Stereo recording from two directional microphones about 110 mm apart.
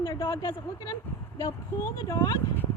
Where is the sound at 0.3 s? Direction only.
35° left (ahead or behind).